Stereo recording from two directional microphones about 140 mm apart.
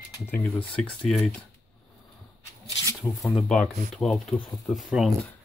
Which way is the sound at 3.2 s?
Centre (ahead or behind).